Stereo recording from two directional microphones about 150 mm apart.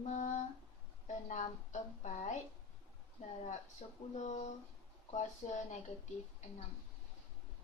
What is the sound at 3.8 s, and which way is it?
A woman's voice, 45° left (ahead or behind).